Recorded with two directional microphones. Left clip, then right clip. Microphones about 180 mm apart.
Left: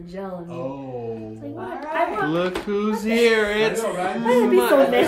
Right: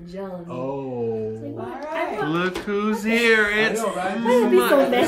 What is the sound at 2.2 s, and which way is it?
Speech, 5° left (ahead or behind).